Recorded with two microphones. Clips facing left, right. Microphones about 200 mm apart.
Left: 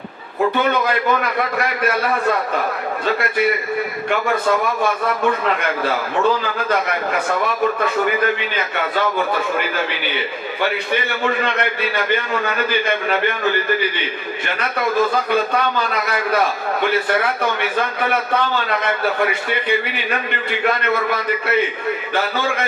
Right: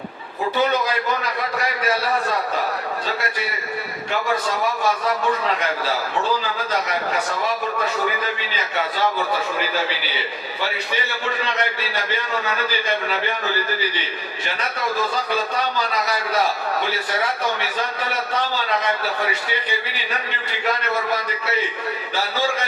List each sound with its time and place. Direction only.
0.5 s a man's voice: 55° left (ahead or behind)
4.1 s a man's voice: 55° left (ahead or behind)
11.2 s a man's voice: 55° left (ahead or behind)
15.1 s a man's voice: 55° left (ahead or behind)